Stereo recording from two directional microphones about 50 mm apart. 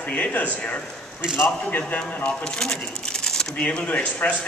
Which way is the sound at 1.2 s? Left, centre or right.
Centre.